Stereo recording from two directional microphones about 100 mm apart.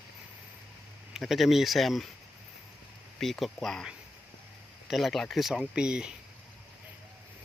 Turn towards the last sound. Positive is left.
turn(degrees=-10)  # may be behind; listen again after turning